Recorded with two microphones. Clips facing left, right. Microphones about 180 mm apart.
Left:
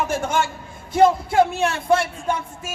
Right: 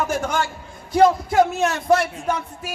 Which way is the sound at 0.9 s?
25° left (ahead or behind).